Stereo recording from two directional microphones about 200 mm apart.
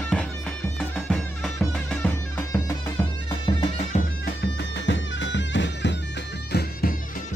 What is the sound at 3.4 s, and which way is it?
Music, 25° left (ahead or behind).